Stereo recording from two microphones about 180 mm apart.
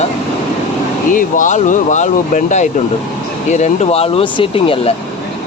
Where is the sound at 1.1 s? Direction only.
45° left (ahead or behind).